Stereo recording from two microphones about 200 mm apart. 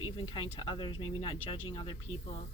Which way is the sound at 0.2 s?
25° left (ahead or behind).